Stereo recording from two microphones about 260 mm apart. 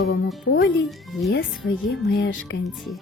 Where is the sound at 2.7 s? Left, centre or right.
Centre.